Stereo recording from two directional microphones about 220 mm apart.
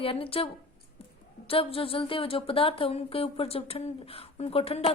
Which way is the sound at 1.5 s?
25° left (ahead or behind).